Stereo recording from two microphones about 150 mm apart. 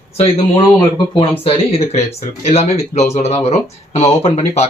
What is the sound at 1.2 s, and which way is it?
Speech, 40° left (ahead or behind).